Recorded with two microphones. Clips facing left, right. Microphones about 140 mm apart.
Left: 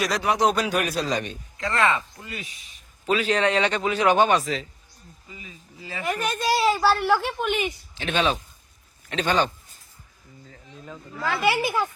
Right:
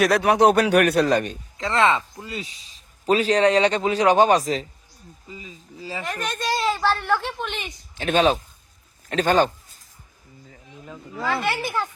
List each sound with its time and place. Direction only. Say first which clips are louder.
0.0 s a man's voice: right 6 dB; 60° right (ahead or behind)
1.5 s speech: right 3 dB; 25° right (ahead or behind)
6.1 s a woman's voice: left 3 dB; 5° left (ahead or behind)
7.9 s speech: right 6 dB; 45° right (ahead or behind)
10.5 s a sound: even; 10° right (ahead or behind)
10.9 s speech: right 2 dB; centre (ahead or behind)